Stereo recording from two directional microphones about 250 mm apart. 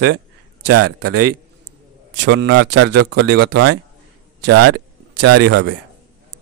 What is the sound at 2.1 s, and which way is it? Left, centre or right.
Speech, right.